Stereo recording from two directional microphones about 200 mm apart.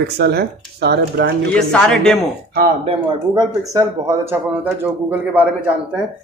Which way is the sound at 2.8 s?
30° right (ahead or behind).